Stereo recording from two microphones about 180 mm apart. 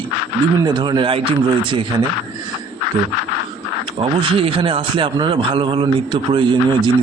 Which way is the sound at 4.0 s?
30° right (ahead or behind).